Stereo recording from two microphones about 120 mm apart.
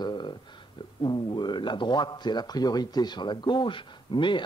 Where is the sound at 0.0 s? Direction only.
40° left (ahead or behind).